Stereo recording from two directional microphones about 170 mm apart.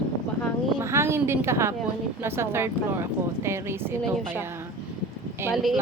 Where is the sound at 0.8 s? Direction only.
15° right (ahead or behind).